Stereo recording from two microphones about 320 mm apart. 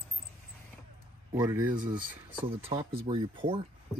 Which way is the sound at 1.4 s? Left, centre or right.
Centre.